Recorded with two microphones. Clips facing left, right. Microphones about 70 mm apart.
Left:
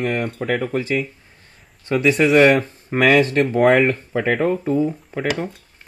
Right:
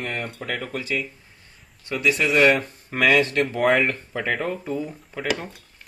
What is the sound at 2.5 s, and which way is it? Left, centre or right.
Speech, left.